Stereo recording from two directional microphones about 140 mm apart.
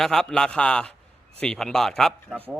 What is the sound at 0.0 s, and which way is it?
A man's voice, 5° left (ahead or behind).